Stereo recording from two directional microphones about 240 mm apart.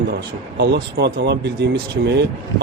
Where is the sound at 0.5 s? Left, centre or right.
Right.